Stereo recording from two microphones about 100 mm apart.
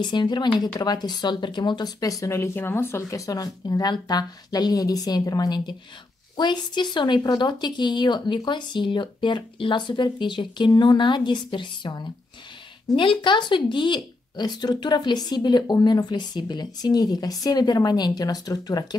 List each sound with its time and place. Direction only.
0.0 s speech: 50° left (ahead or behind)